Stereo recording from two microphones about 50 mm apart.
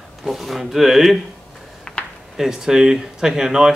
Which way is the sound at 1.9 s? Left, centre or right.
Left.